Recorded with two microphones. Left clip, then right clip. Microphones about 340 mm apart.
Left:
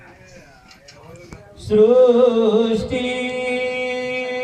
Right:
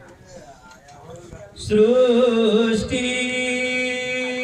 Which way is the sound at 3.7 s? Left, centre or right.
Centre.